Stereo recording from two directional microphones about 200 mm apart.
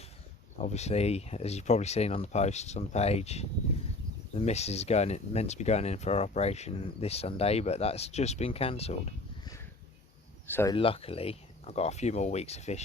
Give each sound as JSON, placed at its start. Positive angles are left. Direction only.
{"t": 0.6, "sound": "speech", "side_deg": 35}
{"t": 10.4, "sound": "speech", "side_deg": 10}
{"t": 10.8, "sound": "speech", "side_deg": 30}